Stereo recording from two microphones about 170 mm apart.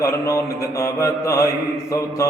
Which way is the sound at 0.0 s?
15° left (ahead or behind).